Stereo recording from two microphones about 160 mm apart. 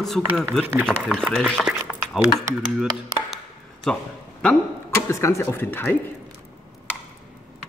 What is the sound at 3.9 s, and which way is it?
Speech, 5° left (ahead or behind).